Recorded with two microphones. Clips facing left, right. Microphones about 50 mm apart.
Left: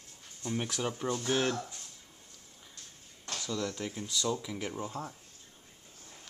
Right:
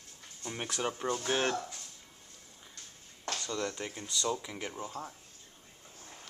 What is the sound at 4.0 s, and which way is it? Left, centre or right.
Speech, centre.